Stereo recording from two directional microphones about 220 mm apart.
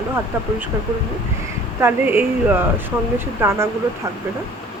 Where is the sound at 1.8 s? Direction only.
10° right (ahead or behind).